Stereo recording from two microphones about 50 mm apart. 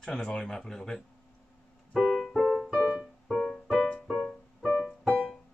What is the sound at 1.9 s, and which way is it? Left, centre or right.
Keyboard, centre.